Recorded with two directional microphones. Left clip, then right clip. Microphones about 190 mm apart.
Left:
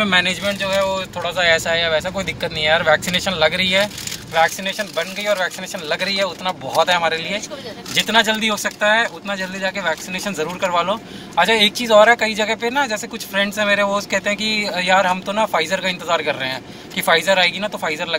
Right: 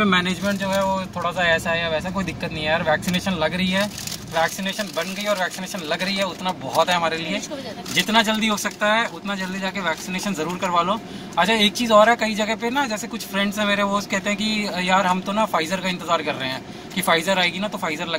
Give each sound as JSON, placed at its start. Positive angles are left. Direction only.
{"t": 0.0, "sound": "speech", "side_deg": -10}
{"t": 9.8, "sound": "speech", "side_deg": -5}